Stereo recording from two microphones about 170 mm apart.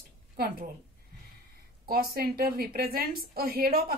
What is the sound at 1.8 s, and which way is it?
A woman's voice, 60° right (ahead or behind).